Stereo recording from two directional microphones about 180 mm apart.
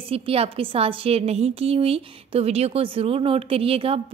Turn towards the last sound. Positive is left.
turn(degrees=-30)  # may be behind; listen again after turning